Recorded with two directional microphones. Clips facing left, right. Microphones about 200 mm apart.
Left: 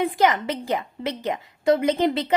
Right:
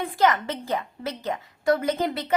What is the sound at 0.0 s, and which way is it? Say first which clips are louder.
A woman's voice: left 2 dB; 15° left (ahead or behind).